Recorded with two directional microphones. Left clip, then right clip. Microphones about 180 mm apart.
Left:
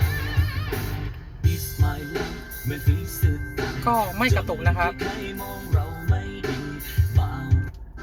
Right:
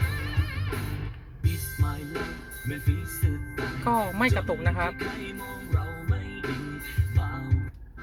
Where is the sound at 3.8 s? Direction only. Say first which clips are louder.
Left 3 dB; 20° right (ahead or behind).